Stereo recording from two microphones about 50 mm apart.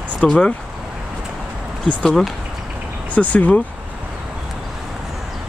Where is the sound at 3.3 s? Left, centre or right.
Left.